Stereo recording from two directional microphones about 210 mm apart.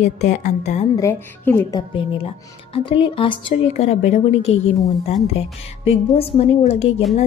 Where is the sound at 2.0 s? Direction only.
25° left (ahead or behind).